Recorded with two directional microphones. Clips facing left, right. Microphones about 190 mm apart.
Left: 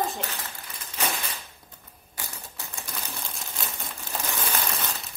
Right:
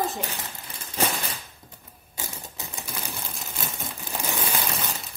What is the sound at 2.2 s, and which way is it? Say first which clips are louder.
Typewriter: right 3 dB; 20° right (ahead or behind).